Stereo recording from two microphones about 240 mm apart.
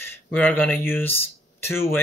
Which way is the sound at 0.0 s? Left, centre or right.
Centre.